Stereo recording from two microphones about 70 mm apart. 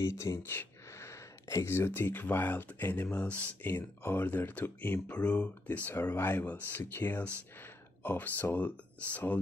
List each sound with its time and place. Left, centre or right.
0.0 s speech: left; by 3.4 s centre
3.6 s speech: left
5.1 s speech: centre
5.9 s speech: left